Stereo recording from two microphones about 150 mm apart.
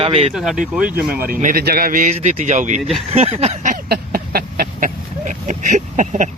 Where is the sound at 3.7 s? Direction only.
75° right (ahead or behind); by 6.2 s 55° right (ahead or behind).